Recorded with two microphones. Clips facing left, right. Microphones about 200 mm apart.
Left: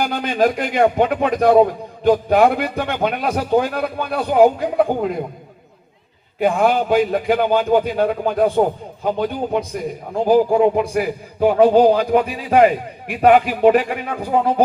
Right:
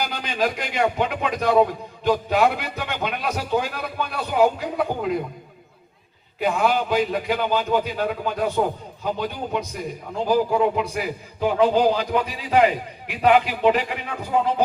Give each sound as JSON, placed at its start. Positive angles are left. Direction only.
{"t": 0.0, "sound": "speech", "side_deg": 50}
{"t": 6.4, "sound": "speech", "side_deg": 50}